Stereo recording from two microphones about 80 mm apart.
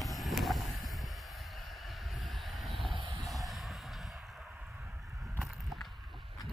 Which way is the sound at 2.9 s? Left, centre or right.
Right.